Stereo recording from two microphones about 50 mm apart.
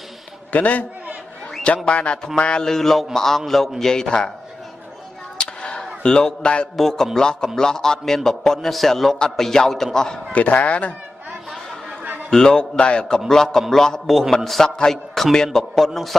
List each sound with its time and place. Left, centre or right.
0.5 s a man's voice: left
1.9 s a man's voice: left
5.4 s a sound: centre
6.8 s a man's voice: centre
10.3 s speech: left
12.0 s a sound: right
12.3 s a man's voice: centre